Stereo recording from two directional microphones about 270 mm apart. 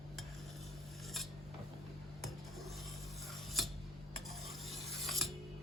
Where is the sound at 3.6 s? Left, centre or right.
Centre.